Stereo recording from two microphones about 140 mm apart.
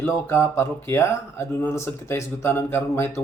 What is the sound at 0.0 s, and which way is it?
Speech, 20° left (ahead or behind).